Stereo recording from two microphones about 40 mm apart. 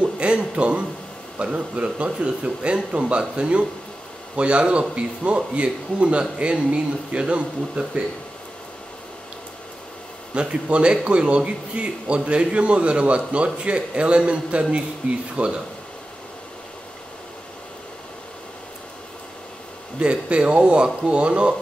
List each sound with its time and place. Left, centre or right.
0.0 s a sound: right
1.4 s speech: right
10.3 s speech: right
20.0 s speech: right